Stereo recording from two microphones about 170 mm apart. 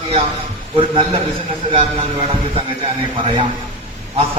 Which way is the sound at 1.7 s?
30° right (ahead or behind).